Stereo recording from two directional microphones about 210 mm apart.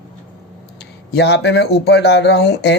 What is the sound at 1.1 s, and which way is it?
A man's voice, 55° left (ahead or behind).